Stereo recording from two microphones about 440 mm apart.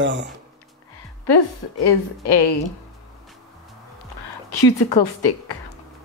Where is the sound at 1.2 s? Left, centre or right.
Left.